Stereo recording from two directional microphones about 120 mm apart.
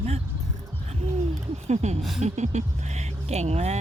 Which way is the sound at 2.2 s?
70° right (ahead or behind).